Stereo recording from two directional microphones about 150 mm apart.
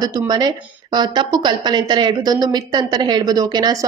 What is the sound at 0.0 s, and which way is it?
A woman's voice, 25° right (ahead or behind).